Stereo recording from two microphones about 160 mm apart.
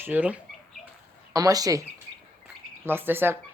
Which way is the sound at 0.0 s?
10° right (ahead or behind).